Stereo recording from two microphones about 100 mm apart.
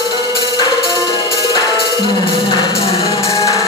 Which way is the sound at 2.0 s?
50° left (ahead or behind).